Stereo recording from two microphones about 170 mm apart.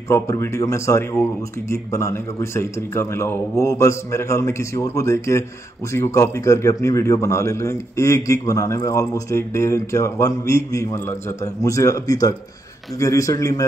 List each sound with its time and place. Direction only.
0.1 s a man's voice: 15° left (ahead or behind)